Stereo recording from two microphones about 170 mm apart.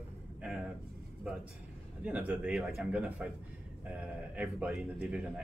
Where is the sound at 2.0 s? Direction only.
5° right (ahead or behind).